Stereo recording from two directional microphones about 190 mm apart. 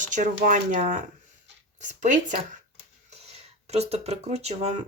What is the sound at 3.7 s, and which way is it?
Speech, 35° right (ahead or behind).